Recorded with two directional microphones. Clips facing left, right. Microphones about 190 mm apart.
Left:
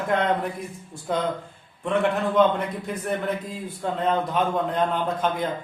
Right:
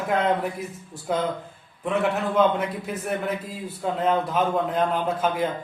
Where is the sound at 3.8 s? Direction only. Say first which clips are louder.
Right 1 dB; 5° right (ahead or behind).